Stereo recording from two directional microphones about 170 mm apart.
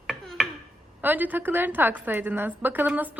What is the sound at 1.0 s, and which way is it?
A woman's voice, 10° right (ahead or behind).